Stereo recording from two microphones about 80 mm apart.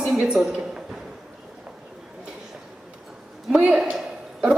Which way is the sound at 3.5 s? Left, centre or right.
Centre.